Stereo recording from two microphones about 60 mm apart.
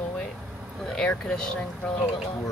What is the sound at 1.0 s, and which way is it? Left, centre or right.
Speech, centre.